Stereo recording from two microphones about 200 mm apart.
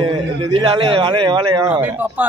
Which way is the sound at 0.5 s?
30° right (ahead or behind).